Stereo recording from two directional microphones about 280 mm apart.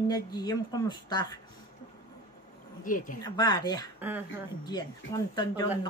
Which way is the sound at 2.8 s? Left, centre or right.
Left.